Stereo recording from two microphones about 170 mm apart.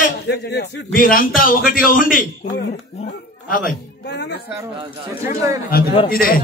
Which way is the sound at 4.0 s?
90° left.